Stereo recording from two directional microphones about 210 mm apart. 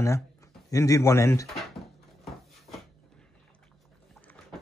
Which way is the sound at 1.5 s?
Centre (ahead or behind).